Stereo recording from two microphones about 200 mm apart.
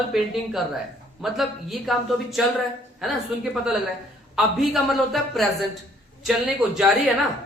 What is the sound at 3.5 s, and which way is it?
A man's voice, 5° right (ahead or behind).